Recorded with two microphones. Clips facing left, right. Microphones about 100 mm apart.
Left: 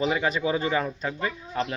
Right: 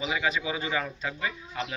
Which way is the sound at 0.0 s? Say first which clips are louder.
Left 4 dB; 40° left (ahead or behind).